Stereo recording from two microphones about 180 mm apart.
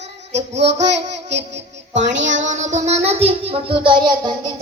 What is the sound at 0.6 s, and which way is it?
A child's voice, 75° right (ahead or behind).